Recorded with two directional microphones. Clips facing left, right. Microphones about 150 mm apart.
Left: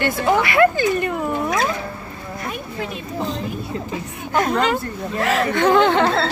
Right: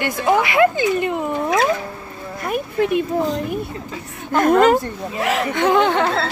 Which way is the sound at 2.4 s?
55° right (ahead or behind).